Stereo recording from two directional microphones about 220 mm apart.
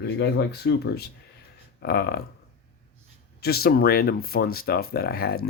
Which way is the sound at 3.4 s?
45° left (ahead or behind).